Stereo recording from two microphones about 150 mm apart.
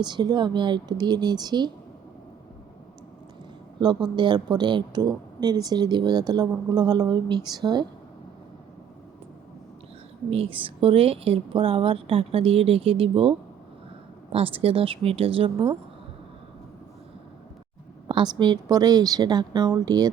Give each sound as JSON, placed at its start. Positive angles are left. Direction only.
{"t": 0.0, "sound": "speech", "side_deg": -30}
{"t": 3.8, "sound": "speech", "side_deg": -30}
{"t": 10.2, "sound": "a woman's voice", "side_deg": -40}
{"t": 14.3, "sound": "a woman's voice", "side_deg": -40}
{"t": 18.1, "sound": "speech", "side_deg": -30}